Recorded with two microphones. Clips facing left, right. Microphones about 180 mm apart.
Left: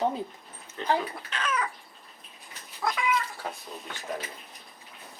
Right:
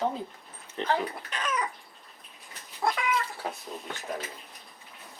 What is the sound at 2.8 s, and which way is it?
Cat, 25° right (ahead or behind).